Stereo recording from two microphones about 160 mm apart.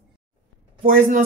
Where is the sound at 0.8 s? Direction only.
55° right (ahead or behind).